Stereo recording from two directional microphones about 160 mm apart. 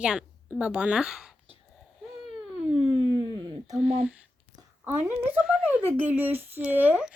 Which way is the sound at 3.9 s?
5° right (ahead or behind).